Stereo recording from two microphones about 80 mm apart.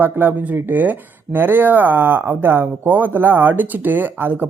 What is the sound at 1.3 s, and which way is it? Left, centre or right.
Speech, right.